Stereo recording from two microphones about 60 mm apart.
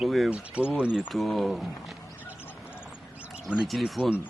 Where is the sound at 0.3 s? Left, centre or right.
Right.